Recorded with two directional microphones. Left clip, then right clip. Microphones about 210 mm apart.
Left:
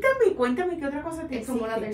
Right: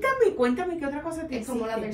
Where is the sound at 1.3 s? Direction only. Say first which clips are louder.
Left 2 dB; centre (ahead or behind).